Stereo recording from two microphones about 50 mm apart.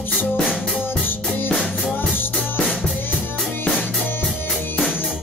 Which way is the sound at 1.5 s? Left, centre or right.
Centre.